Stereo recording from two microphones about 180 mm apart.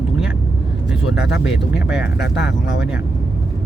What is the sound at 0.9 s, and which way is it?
Speech, 5° right (ahead or behind).